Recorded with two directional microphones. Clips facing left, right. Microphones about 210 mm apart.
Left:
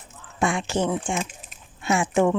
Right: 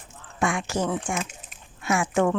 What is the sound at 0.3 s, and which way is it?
Speech, 25° left (ahead or behind).